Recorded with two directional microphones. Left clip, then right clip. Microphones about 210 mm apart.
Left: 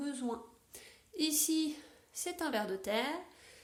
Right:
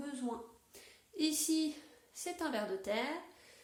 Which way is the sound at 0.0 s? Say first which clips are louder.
Left 3 dB; 55° left (ahead or behind).